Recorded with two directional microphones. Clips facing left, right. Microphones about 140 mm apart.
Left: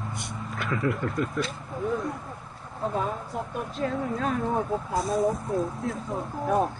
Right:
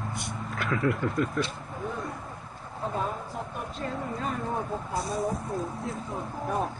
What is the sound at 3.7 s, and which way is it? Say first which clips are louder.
Speech: left 6 dB; centre (ahead or behind).